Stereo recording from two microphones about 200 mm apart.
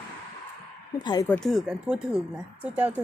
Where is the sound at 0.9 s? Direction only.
20° left (ahead or behind).